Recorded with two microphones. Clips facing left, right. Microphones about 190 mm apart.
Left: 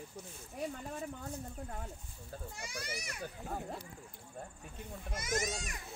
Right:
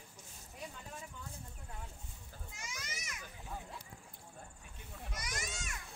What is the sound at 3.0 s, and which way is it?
Children playing, 60° left (ahead or behind).